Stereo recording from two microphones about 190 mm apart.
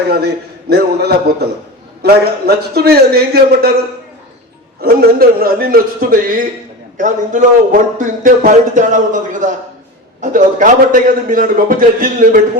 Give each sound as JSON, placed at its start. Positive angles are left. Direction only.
{"t": 0.7, "sound": "a man's voice", "side_deg": -60}
{"t": 4.8, "sound": "a man's voice", "side_deg": -55}